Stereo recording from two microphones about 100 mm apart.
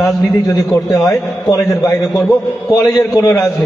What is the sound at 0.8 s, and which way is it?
A man's voice, 35° left (ahead or behind).